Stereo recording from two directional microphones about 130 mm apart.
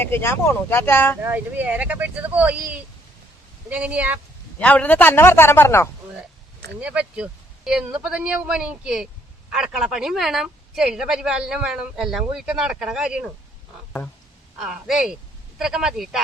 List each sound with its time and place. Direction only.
0.0 s a man's voice: 15° left (ahead or behind)
1.2 s speech: 15° right (ahead or behind)
4.6 s a man's voice: 10° left (ahead or behind)
6.7 s a woman's voice: 10° right (ahead or behind)
14.6 s speech: 5° right (ahead or behind)